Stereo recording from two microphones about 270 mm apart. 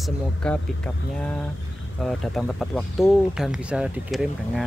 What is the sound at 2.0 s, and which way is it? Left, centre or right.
Speech, centre.